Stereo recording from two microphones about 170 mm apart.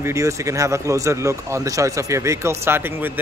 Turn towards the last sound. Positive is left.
turn(degrees=-10)  # may be behind; listen again after turning